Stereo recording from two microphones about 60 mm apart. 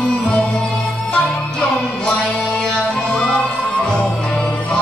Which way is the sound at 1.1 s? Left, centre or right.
Centre.